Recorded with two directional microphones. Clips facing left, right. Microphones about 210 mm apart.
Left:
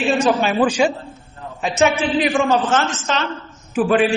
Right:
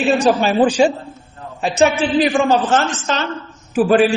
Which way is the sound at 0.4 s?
30° right (ahead or behind).